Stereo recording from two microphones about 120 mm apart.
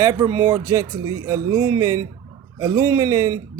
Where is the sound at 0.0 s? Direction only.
30° right (ahead or behind).